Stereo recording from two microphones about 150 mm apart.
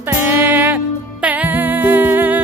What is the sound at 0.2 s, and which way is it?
Music, 10° right (ahead or behind).